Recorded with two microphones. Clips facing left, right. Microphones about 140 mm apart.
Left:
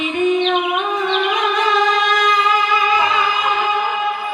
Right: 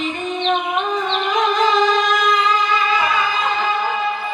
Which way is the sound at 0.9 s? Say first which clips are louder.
Left 1 dB; 5° left (ahead or behind).